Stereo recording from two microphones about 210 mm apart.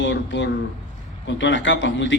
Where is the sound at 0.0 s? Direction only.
60° left (ahead or behind).